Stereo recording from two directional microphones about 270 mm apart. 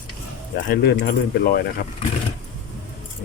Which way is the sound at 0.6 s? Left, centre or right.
Left.